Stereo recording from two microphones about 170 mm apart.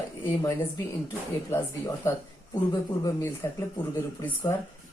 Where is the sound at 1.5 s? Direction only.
15° left (ahead or behind).